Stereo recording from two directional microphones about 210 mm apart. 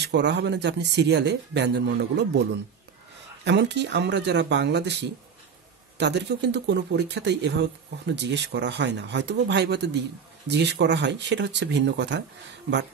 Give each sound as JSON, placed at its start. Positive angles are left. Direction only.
{"t": 0.0, "sound": "speech", "side_deg": -55}